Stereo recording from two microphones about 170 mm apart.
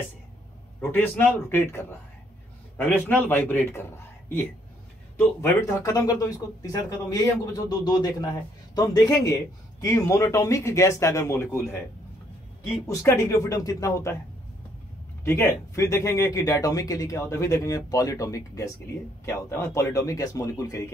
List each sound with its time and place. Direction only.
0.7 s speech: 10° left (ahead or behind)
12.8 s speech: 15° left (ahead or behind)
15.2 s speech: 15° left (ahead or behind)